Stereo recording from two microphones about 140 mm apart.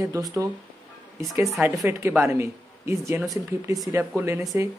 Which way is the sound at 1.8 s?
15° right (ahead or behind).